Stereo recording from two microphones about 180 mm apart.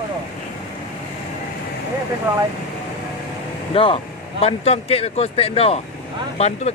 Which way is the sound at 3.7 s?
30° left (ahead or behind).